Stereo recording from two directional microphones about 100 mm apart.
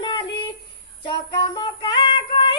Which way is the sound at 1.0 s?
50° left (ahead or behind).